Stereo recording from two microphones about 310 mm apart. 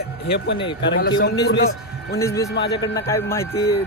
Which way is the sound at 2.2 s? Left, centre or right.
Centre.